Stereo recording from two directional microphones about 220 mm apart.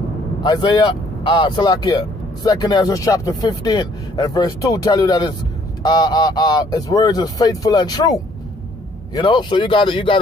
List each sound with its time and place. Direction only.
0.4 s speech: 20° left (ahead or behind)